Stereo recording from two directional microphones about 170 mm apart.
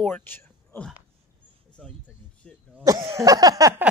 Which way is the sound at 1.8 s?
Centre (ahead or behind).